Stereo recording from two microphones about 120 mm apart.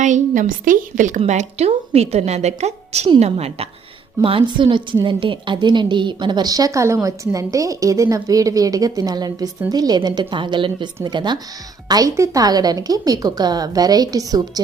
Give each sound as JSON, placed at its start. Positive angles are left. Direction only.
{"t": 0.0, "sound": "a woman's voice", "side_deg": -90}
{"t": 1.2, "sound": "a woman's voice", "side_deg": -70}
{"t": 4.2, "sound": "a woman's voice", "side_deg": -45}